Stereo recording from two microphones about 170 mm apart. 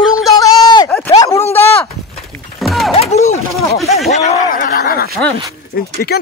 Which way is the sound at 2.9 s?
40° left (ahead or behind).